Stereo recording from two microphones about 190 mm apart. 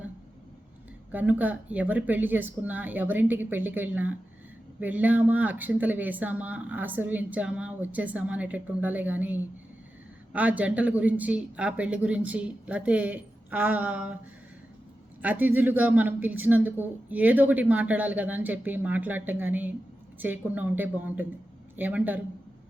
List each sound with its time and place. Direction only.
1.1 s speech: 10° right (ahead or behind)
15.2 s speech: 10° right (ahead or behind)